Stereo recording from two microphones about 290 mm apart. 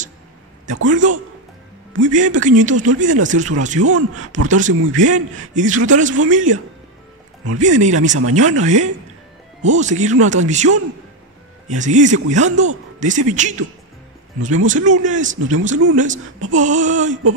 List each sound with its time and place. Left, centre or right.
0.8 s speech: right
8.1 s speech: right
8.4 s speech: right
15.8 s speech: right
16.4 s speech: right